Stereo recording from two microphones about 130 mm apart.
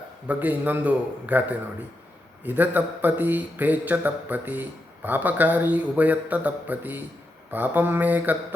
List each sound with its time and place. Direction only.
0.3 s a man's voice: 15° right (ahead or behind)